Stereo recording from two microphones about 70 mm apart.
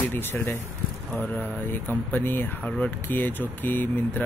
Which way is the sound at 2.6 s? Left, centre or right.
Centre.